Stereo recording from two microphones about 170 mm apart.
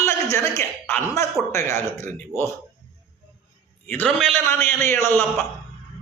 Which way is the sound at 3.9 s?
10° left (ahead or behind).